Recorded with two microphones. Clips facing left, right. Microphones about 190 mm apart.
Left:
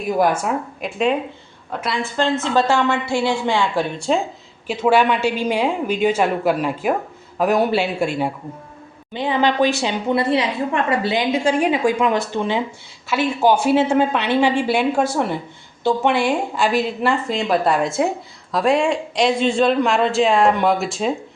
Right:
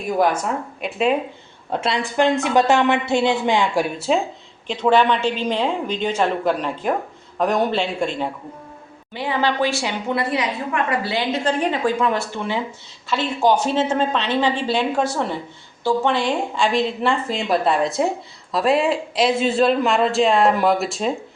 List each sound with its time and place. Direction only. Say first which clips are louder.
0.2 s a man's voice: left 1 dB; 5° left (ahead or behind)
1.7 s a woman's voice: right 2 dB; 25° right (ahead or behind); by 4.2 s 5° right (ahead or behind)
4.6 s a woman's voice: left 1 dB; 5° left (ahead or behind)
9.1 s a woman's voice: left 3 dB; 20° left (ahead or behind); by 21.1 s centre (ahead or behind)